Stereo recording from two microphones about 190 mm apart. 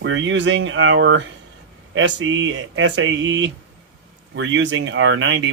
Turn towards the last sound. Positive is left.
turn(degrees=-80)